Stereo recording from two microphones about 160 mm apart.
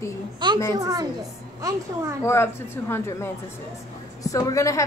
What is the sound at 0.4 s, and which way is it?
Speech, 30° right (ahead or behind).